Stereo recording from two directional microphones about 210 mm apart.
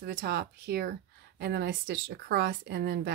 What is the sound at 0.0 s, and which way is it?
Speech, 50° right (ahead or behind).